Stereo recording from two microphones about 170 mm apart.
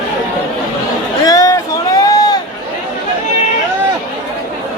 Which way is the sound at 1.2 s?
20° left (ahead or behind).